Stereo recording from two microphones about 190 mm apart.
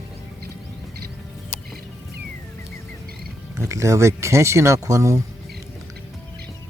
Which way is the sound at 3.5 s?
15° right (ahead or behind).